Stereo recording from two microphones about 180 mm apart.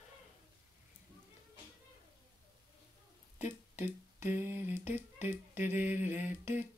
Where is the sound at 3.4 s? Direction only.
40° left (ahead or behind).